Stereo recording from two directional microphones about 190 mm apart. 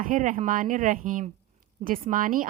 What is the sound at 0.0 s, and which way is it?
A woman's voice, 45° right (ahead or behind).